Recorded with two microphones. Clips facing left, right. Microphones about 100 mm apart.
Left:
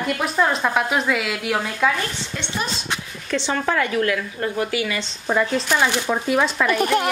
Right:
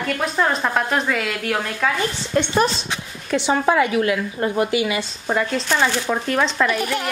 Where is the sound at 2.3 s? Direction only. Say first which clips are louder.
Right 12 dB; 50° right (ahead or behind).